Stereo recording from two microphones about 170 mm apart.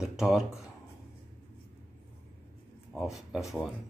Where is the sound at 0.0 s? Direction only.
5° right (ahead or behind).